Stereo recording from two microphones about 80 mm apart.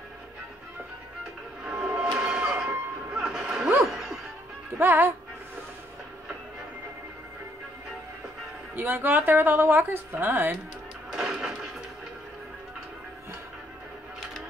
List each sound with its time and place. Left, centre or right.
1.6 s printer: centre
2.0 s a sound: centre
3.9 s music: centre
4.7 s a woman's voice: right
8.7 s a woman's voice: right
11.1 s a sound: centre